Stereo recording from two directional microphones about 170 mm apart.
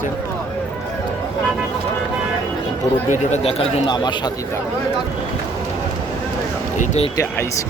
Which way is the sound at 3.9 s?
25° left (ahead or behind).